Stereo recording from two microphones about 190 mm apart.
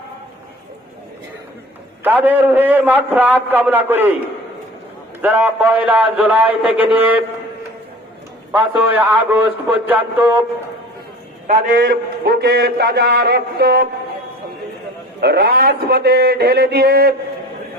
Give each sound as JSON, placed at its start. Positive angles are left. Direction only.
{"t": 2.0, "sound": "a man's voice", "side_deg": -10}
{"t": 5.2, "sound": "a man's voice", "side_deg": -10}
{"t": 8.5, "sound": "a man's voice", "side_deg": -10}
{"t": 11.9, "sound": "a man's voice", "side_deg": -55}
{"t": 15.2, "sound": "a man's voice", "side_deg": -55}